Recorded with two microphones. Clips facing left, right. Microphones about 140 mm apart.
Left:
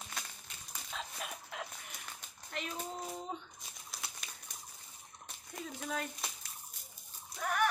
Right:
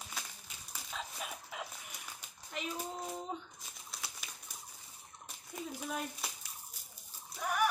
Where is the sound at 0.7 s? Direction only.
5° right (ahead or behind).